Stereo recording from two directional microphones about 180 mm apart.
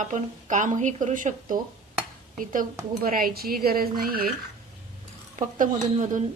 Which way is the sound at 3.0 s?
50° right (ahead or behind).